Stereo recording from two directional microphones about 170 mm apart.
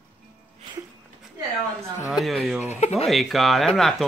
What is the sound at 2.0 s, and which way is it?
Speech, centre (ahead or behind).